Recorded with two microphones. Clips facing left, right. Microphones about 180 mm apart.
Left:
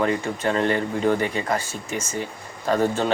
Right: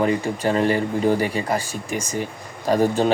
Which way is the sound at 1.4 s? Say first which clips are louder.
Right 2 dB; 10° right (ahead or behind).